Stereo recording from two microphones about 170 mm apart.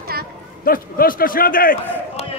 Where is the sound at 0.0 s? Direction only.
65° right (ahead or behind).